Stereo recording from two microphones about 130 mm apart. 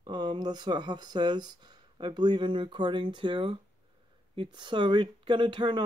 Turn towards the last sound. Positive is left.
turn(degrees=-40)  # may be behind; listen again after turning